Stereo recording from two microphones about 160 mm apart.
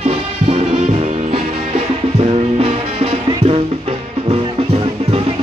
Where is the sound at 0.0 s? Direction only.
40° right (ahead or behind).